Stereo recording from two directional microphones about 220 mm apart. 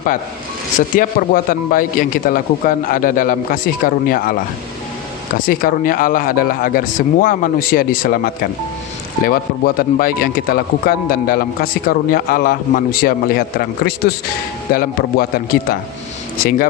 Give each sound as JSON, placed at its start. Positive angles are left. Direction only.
{"t": 0.8, "sound": "speech", "side_deg": 40}